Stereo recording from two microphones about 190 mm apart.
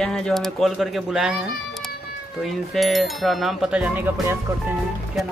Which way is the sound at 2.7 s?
Centre (ahead or behind).